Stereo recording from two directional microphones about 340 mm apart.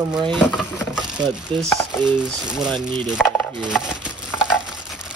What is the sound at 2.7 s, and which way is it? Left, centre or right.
Speech, centre.